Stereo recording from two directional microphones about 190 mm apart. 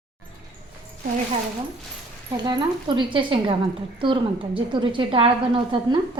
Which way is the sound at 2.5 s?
25° right (ahead or behind).